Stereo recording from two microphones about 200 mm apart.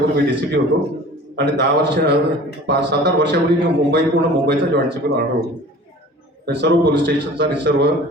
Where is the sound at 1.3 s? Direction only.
55° right (ahead or behind).